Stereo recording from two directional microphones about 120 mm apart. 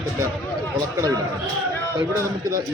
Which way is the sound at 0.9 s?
30° right (ahead or behind).